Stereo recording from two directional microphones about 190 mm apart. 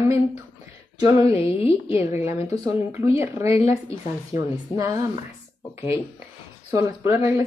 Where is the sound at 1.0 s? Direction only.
30° left (ahead or behind).